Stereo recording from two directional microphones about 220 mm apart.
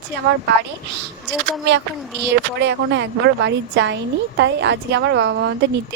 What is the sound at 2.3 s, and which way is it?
A woman's voice, 55° right (ahead or behind).